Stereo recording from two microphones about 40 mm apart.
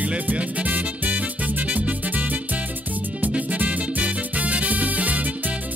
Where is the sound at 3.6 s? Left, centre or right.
Right.